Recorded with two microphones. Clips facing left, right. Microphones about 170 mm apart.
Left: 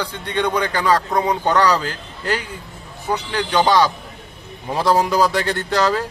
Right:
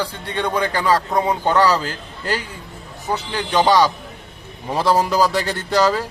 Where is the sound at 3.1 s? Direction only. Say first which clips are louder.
Left 1 dB; 10° right (ahead or behind).